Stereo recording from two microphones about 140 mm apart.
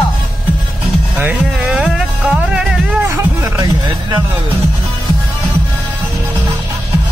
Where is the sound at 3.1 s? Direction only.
20° right (ahead or behind).